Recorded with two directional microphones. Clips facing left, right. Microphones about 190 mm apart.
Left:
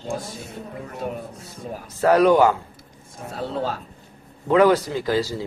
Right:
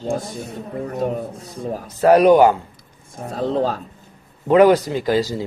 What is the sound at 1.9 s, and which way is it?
Speech, 15° right (ahead or behind).